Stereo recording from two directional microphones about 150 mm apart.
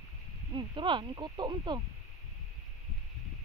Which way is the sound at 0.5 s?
30° right (ahead or behind).